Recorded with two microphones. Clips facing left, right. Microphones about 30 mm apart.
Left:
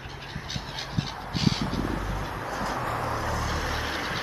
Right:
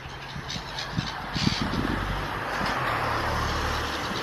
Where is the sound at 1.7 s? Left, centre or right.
Right.